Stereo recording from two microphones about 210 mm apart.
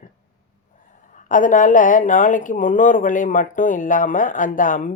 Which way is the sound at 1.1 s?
40° left (ahead or behind).